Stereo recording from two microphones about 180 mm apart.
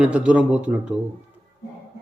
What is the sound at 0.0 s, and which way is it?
Speech, 5° right (ahead or behind).